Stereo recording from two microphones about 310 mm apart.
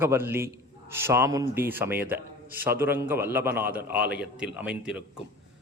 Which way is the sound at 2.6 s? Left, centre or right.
Centre.